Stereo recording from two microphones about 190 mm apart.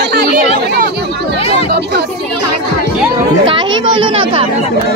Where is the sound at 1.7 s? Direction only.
60° right (ahead or behind).